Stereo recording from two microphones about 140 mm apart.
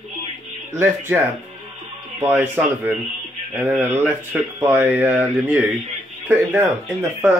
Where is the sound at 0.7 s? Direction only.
15° right (ahead or behind).